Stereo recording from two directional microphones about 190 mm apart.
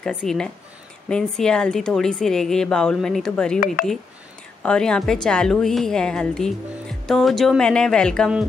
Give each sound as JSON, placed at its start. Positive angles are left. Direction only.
{"t": 0.0, "sound": "a woman's voice", "side_deg": 5}
{"t": 3.5, "sound": "speech", "side_deg": 45}
{"t": 4.6, "sound": "a woman's voice", "side_deg": 5}